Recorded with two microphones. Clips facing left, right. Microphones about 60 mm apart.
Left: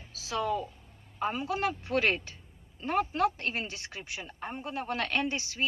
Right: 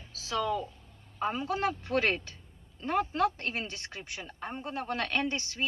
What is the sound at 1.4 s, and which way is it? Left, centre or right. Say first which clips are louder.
Speech: right 1 dB; right.